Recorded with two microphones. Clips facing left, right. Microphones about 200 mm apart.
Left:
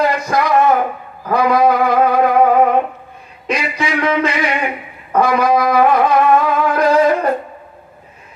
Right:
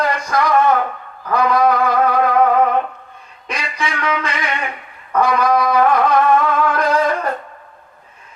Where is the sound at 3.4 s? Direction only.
25° left (ahead or behind).